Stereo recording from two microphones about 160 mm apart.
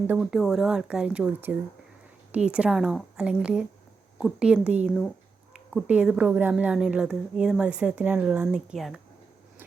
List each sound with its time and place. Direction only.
0.1 s a woman's voice: 5° right (ahead or behind)